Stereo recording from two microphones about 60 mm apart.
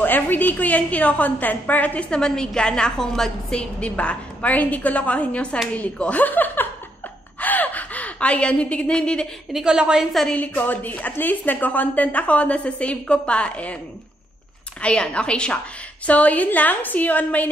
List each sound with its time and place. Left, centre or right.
0.0 s a woman's voice: left
2.0 s a woman's voice: centre
3.8 s a woman's voice: centre
7.3 s gasp: left
9.5 s a woman's voice: centre
10.3 s a woman's voice: left
14.8 s a woman's voice: centre